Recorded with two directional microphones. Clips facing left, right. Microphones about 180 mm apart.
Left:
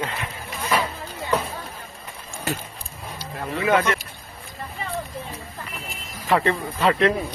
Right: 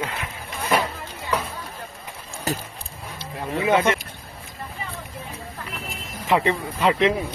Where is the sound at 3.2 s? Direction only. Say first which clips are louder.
Right 1 dB; 25° right (ahead or behind).